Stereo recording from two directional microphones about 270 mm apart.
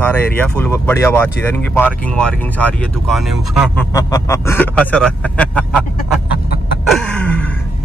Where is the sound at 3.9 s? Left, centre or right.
Centre.